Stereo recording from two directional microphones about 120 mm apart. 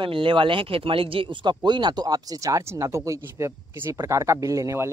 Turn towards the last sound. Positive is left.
turn(degrees=-25)  # may be behind; listen again after turning